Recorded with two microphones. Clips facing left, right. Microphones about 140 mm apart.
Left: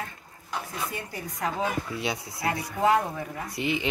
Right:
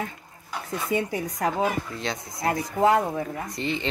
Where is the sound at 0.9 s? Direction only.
65° right (ahead or behind).